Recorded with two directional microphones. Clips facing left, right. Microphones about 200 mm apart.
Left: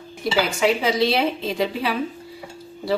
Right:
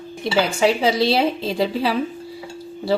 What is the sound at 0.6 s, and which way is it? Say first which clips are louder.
A woman's voice: right 2 dB; 30° right (ahead or behind).